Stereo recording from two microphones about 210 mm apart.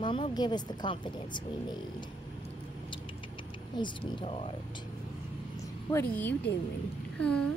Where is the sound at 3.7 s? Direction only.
25° left (ahead or behind).